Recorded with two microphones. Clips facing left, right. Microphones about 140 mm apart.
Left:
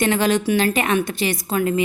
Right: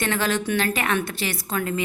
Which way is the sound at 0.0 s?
15° left (ahead or behind).